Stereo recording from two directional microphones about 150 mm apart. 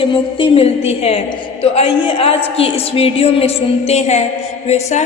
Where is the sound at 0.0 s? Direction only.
35° left (ahead or behind).